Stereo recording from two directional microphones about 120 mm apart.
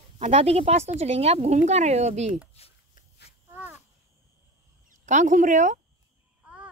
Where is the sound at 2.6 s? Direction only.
60° left (ahead or behind).